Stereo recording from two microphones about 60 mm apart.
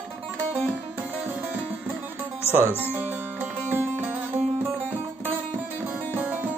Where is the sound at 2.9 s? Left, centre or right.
Right.